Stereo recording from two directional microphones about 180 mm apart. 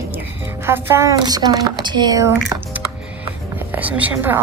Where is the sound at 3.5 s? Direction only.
10° right (ahead or behind).